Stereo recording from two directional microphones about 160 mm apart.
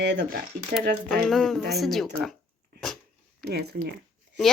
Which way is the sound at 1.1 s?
Centre (ahead or behind).